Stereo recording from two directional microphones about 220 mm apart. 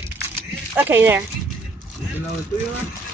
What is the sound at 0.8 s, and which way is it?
Speech, 10° right (ahead or behind).